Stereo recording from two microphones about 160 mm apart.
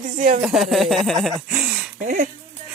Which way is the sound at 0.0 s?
60° right (ahead or behind).